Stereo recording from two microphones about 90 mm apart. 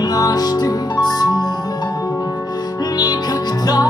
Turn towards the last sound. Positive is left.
turn(degrees=45)  # may be behind; listen again after turning